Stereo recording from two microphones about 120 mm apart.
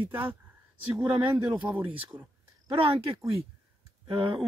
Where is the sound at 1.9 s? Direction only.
50° right (ahead or behind).